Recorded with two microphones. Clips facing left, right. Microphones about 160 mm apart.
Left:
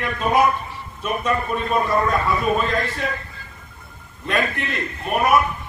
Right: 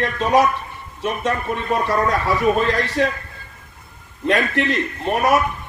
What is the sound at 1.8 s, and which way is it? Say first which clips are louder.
Speech: right 1 dB; 85° right.